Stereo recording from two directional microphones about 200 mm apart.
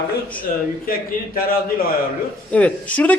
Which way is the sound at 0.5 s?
40° left (ahead or behind).